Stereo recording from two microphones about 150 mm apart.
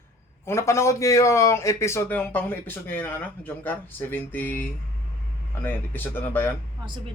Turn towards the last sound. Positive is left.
turn(degrees=15)  # may be behind; listen again after turning